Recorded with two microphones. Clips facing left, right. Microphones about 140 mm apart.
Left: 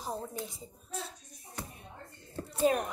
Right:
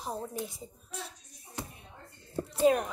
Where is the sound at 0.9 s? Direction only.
30° left (ahead or behind).